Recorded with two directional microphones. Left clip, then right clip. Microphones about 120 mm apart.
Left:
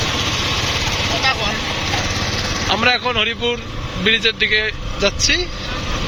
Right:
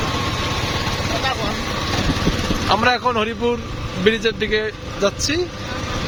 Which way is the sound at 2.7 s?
80° right.